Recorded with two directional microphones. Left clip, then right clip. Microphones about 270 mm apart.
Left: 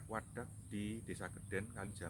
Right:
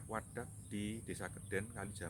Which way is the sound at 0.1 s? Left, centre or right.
Centre.